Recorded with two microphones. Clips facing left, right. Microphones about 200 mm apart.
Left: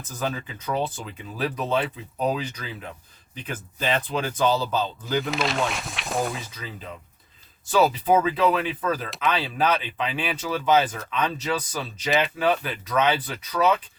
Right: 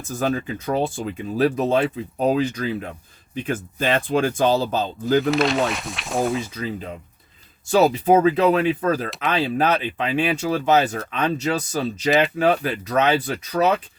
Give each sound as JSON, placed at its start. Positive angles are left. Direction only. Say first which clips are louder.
{"t": 0.2, "sound": "speech", "louder": "right 6 dB", "side_deg": -45}
{"t": 5.3, "sound": "speech", "louder": "right 6 dB", "side_deg": 0}
{"t": 7.8, "sound": "speech", "louder": "right 4 dB", "side_deg": -45}